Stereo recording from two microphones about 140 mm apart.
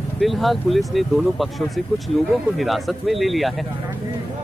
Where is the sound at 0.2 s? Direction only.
Centre (ahead or behind).